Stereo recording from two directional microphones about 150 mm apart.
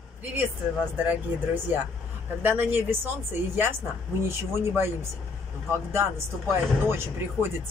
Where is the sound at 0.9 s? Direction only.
10° right (ahead or behind).